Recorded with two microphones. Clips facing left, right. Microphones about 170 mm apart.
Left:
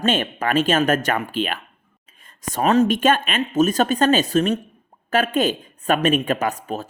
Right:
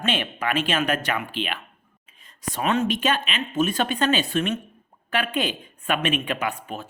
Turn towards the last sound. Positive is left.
turn(degrees=40)  # may be behind; listen again after turning